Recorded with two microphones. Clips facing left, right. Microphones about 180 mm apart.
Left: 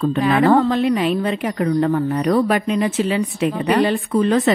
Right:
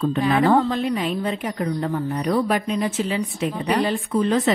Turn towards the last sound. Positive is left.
turn(degrees=65)  # may be behind; listen again after turning